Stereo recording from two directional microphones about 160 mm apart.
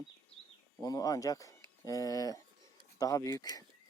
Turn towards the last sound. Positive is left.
turn(degrees=20)  # may be behind; listen again after turning